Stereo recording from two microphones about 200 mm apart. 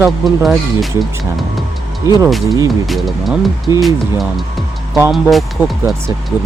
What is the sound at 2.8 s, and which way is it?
Speech, centre (ahead or behind).